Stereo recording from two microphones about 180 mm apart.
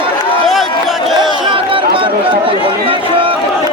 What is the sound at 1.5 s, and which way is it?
Chatter, 30° right (ahead or behind).